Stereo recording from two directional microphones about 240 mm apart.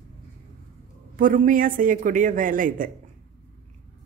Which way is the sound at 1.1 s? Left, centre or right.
Right.